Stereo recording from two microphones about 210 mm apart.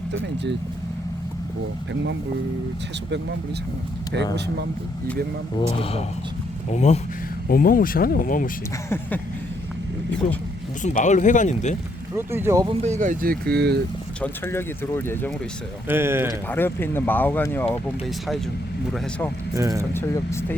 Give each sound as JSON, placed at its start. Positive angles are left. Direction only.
{"t": 5.5, "sound": "speech", "side_deg": 25}
{"t": 7.4, "sound": "speech", "side_deg": 45}
{"t": 8.9, "sound": "speech", "side_deg": 10}
{"t": 10.8, "sound": "speech", "side_deg": 35}
{"t": 12.1, "sound": "speech", "side_deg": -10}
{"t": 12.8, "sound": "speech", "side_deg": -35}
{"t": 14.2, "sound": "speech", "side_deg": 10}
{"t": 15.9, "sound": "speech", "side_deg": -10}
{"t": 16.5, "sound": "speech", "side_deg": 10}
{"t": 19.5, "sound": "speech", "side_deg": -15}
{"t": 19.9, "sound": "speech", "side_deg": 10}